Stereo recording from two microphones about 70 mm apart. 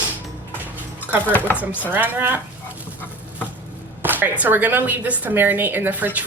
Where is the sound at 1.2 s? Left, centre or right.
Left.